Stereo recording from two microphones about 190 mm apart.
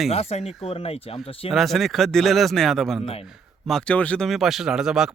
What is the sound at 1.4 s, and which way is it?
Speech, centre (ahead or behind).